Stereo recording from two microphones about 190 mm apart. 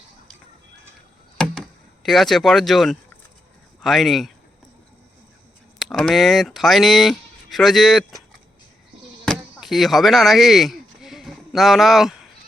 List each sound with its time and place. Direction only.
2.0 s speech: centre (ahead or behind)
5.8 s speech: centre (ahead or behind)
9.2 s chop: centre (ahead or behind)